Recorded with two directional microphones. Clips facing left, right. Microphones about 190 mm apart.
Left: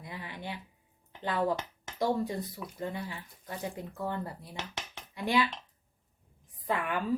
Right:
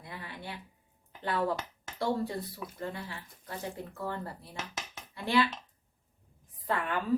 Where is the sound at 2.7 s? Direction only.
20° left (ahead or behind).